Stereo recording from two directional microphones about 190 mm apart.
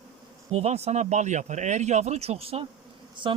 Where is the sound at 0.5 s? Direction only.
35° right (ahead or behind).